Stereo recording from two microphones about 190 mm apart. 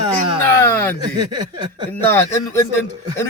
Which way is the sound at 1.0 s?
20° right (ahead or behind).